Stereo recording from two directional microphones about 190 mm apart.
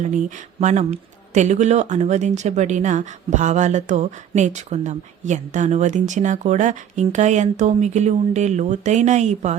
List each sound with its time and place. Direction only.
0.6 s speech: 40° right (ahead or behind)